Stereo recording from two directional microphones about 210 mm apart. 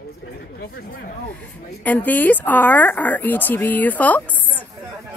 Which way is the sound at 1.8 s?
10° left (ahead or behind).